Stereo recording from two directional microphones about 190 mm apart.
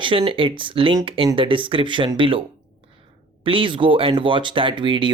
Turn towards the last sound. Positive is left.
turn(degrees=-25)  # may be behind; listen again after turning